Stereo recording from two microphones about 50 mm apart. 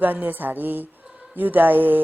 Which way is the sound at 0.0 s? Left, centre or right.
Right.